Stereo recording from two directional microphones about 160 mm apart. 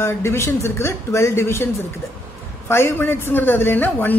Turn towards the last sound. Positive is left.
turn(degrees=10)  # may be behind; listen again after turning